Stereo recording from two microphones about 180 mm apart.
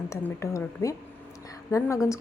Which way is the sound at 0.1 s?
15° left (ahead or behind).